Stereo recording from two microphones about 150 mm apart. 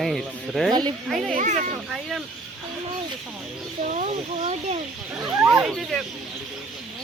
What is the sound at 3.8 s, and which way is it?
Speech, 50° right (ahead or behind).